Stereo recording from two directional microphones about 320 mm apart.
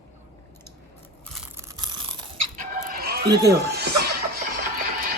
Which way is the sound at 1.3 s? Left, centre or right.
Centre.